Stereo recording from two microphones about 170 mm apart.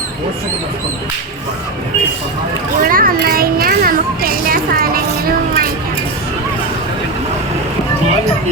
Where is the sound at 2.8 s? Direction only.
55° right (ahead or behind).